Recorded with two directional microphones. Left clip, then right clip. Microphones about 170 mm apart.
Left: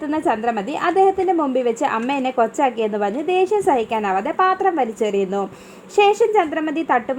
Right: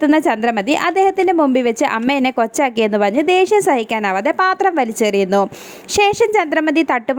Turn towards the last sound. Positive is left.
turn(degrees=-40)  # may be behind; listen again after turning